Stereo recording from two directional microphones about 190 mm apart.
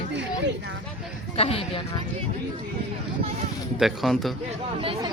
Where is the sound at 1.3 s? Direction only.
30° left (ahead or behind).